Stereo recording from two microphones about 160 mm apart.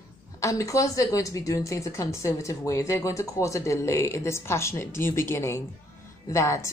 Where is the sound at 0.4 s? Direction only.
20° left (ahead or behind).